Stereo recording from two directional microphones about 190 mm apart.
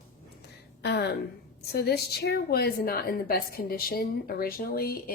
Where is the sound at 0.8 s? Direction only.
60° left (ahead or behind).